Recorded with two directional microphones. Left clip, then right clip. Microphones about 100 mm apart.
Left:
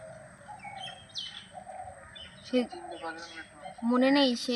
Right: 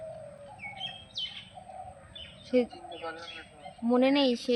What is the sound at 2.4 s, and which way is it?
Speech, 5° right (ahead or behind).